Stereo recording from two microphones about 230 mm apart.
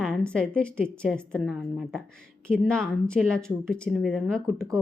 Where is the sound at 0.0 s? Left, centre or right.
Centre.